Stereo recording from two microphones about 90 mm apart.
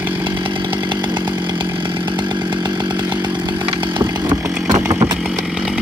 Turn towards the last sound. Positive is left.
turn(degrees=-35)  # may be behind; listen again after turning